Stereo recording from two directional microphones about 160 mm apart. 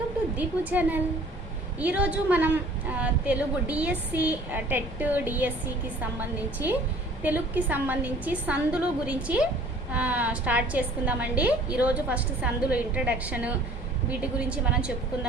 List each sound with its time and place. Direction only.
0.3 s a woman's voice: 10° right (ahead or behind)